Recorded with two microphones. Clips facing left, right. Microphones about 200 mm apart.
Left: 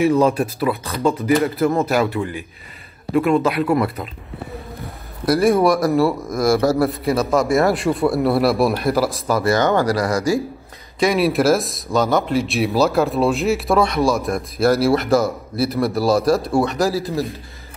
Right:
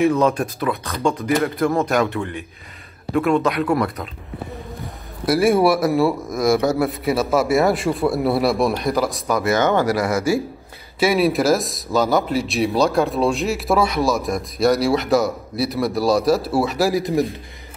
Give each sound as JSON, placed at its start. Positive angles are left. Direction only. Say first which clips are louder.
{"t": 0.1, "sound": "speech", "louder": "left 2 dB", "side_deg": 10}
{"t": 5.2, "sound": "speech", "louder": "left 1 dB", "side_deg": 0}
{"t": 9.4, "sound": "speech", "louder": "left 1 dB", "side_deg": -20}
{"t": 11.0, "sound": "speech", "louder": "even", "side_deg": 0}
{"t": 16.9, "sound": "a man's voice", "louder": "right 3 dB", "side_deg": -15}